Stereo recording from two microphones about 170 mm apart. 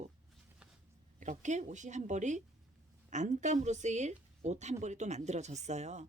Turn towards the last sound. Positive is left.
turn(degrees=-40)  # may be behind; listen again after turning